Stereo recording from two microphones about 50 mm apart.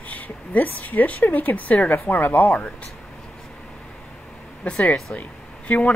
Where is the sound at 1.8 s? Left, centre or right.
Left.